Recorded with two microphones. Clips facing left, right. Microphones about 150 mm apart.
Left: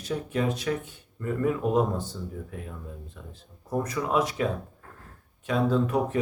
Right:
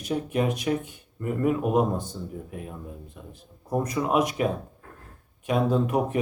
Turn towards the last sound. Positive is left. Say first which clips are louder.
# right 1 dB
turn(degrees=-15)  # may be behind; listen again after turning